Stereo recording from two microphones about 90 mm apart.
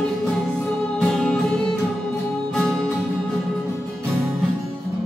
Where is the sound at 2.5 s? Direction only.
5° left (ahead or behind).